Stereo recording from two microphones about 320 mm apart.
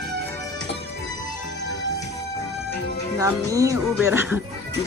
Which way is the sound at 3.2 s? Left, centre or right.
Centre.